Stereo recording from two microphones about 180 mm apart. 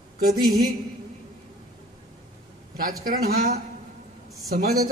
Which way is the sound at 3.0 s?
55° right (ahead or behind).